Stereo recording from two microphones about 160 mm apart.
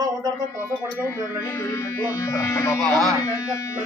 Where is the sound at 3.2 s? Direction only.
20° left (ahead or behind).